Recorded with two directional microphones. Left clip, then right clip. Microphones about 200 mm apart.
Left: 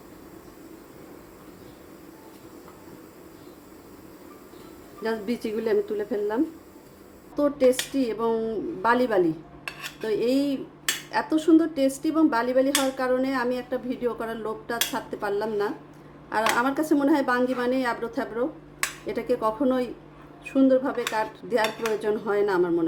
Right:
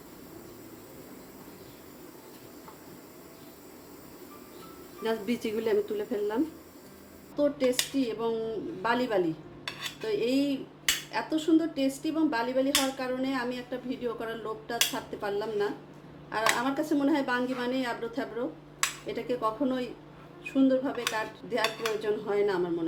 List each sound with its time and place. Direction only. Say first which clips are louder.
5.0 s speech: left 2 dB; 5° left (ahead or behind)
7.3 s speech: left 5 dB; 25° left (ahead or behind)